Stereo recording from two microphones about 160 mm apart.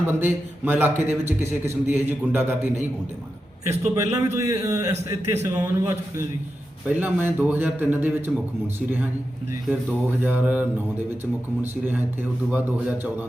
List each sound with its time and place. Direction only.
0.1 s a man's voice: 15° right (ahead or behind)
10.2 s a man's voice: 10° right (ahead or behind)